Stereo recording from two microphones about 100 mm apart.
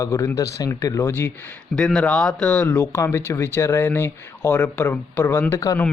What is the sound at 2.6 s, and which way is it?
A man's voice, 25° left (ahead or behind).